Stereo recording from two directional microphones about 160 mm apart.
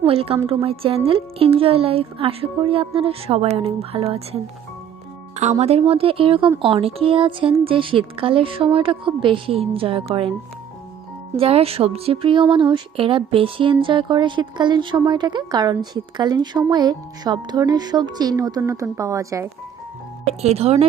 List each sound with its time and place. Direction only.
0.0 s speech: 35° right (ahead or behind)
5.4 s speech: 45° right (ahead or behind)
11.3 s speech: 40° right (ahead or behind); by 19.5 s 20° right (ahead or behind)
20.2 s speech: 40° right (ahead or behind)